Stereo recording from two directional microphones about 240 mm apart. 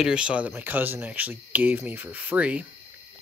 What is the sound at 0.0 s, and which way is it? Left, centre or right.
Speech, centre.